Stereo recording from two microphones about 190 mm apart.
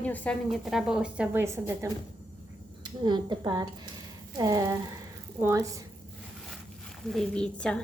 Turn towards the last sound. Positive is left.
turn(degrees=5)  # may be behind; listen again after turning